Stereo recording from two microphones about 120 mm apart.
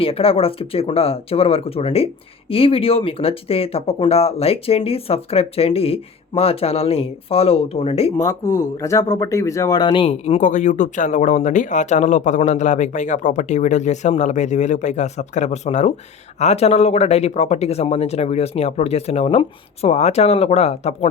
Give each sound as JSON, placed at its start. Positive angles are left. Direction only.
{"t": 0.0, "sound": "speech", "side_deg": 50}
{"t": 8.2, "sound": "speech", "side_deg": 25}
{"t": 10.1, "sound": "speech", "side_deg": 65}